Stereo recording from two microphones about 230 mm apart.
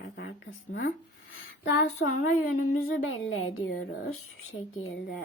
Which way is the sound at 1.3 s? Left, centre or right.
Left.